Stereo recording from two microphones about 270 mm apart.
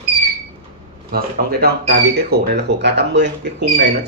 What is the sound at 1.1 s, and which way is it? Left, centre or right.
Speech, right.